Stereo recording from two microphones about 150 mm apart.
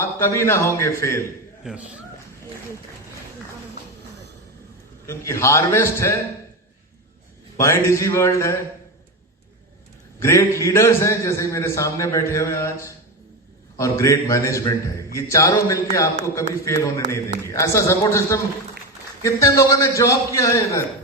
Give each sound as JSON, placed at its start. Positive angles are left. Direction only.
{"t": 0.0, "sound": "a man's voice", "side_deg": 20}
{"t": 1.6, "sound": "a man's voice", "side_deg": -5}
{"t": 5.0, "sound": "a man's voice", "side_deg": 20}
{"t": 7.6, "sound": "a man's voice", "side_deg": 20}
{"t": 10.2, "sound": "a man's voice", "side_deg": 20}